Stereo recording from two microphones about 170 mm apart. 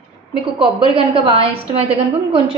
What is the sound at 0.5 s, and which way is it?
A woman's voice, 35° right (ahead or behind).